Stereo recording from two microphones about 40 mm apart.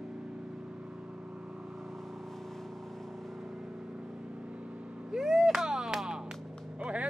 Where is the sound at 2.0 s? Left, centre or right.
Centre.